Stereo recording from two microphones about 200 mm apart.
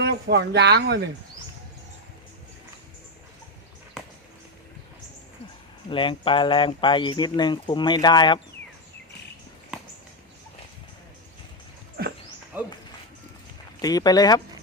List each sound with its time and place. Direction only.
0.0 s speech: 55° right (ahead or behind)
4.0 s a sound: 5° right (ahead or behind)
5.9 s speech: 25° left (ahead or behind)
12.0 s dog: 50° right (ahead or behind)
12.5 s a sound: 10° right (ahead or behind)
13.8 s speech: 20° left (ahead or behind)